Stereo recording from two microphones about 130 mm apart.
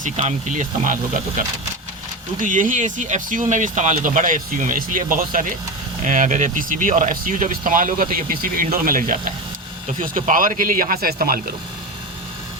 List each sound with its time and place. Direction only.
0.0 s speech: 65° right (ahead or behind)
2.4 s speech: 80° right
6.1 s speech: 75° right (ahead or behind)